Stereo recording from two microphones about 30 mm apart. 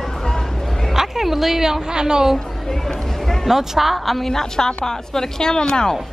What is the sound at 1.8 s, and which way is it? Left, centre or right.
Speech, right.